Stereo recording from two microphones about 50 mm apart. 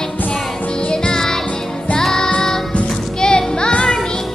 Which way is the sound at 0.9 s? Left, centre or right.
Centre.